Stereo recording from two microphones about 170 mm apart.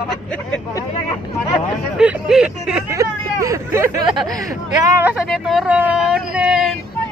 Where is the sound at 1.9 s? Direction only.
5° right (ahead or behind).